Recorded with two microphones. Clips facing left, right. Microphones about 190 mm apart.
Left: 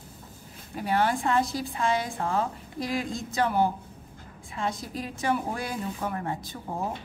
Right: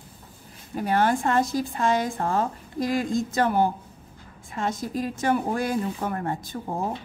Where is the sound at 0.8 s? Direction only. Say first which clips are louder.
Right 3 dB; 45° right (ahead or behind).